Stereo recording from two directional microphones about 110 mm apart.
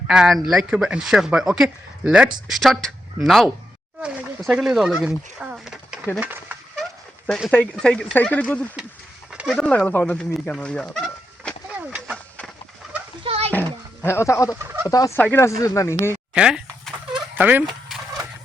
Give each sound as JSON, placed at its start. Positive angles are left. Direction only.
{"t": 0.1, "sound": "speech", "side_deg": -5}
{"t": 2.6, "sound": "speech", "side_deg": 0}
{"t": 7.3, "sound": "speech", "side_deg": 0}
{"t": 7.8, "sound": "speech", "side_deg": 10}
{"t": 9.5, "sound": "fowl", "side_deg": 10}
{"t": 13.2, "sound": "a sound", "side_deg": -65}
{"t": 14.0, "sound": "speech", "side_deg": 25}
{"t": 14.8, "sound": "fowl", "side_deg": 30}
{"t": 15.2, "sound": "speech", "side_deg": 20}
{"t": 16.3, "sound": "a sound", "side_deg": -10}
{"t": 17.3, "sound": "speech", "side_deg": -15}